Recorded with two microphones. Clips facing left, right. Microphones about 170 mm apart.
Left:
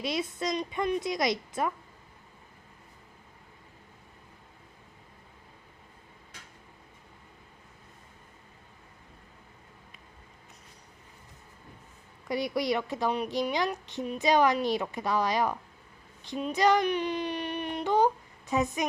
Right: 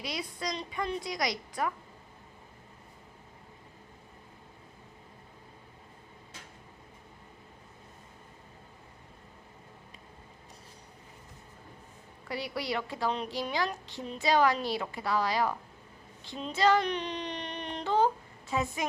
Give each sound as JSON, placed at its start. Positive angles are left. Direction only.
{"t": 0.0, "sound": "a woman's voice", "side_deg": 25}
{"t": 12.3, "sound": "a woman's voice", "side_deg": 20}